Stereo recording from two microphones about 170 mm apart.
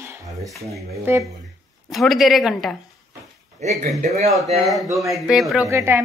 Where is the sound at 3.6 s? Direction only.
40° right (ahead or behind).